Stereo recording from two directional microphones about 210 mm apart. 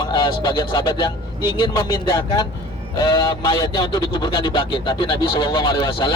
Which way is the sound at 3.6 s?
20° left (ahead or behind).